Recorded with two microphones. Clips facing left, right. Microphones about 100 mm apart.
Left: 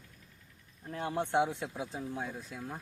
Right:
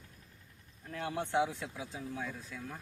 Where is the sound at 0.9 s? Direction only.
30° left (ahead or behind).